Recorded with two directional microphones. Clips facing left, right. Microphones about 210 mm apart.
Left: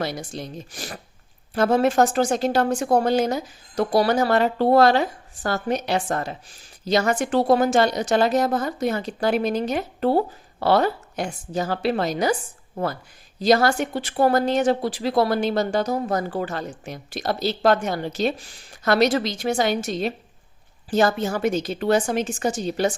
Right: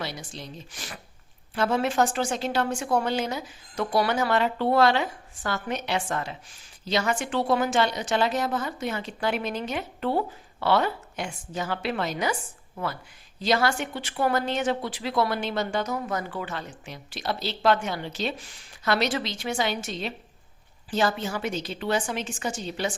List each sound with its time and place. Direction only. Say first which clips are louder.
0.0 s a woman's voice: left 7 dB; 45° left (ahead or behind)